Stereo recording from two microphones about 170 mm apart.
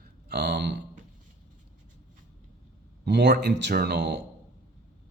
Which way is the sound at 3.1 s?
85° right.